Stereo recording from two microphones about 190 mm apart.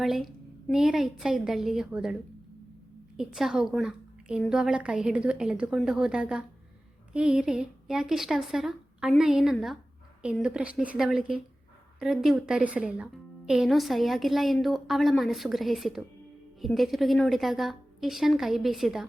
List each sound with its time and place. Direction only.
0.0 s a woman's voice: centre (ahead or behind)
3.2 s a woman's voice: centre (ahead or behind)